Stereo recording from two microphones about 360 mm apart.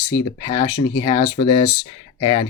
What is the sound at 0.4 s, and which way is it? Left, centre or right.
Speech, centre.